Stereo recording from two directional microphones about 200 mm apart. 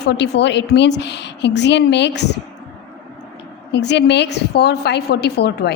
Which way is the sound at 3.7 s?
60° left (ahead or behind).